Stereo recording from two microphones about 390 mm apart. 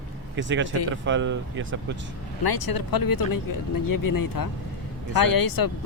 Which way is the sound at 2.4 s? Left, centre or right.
Left.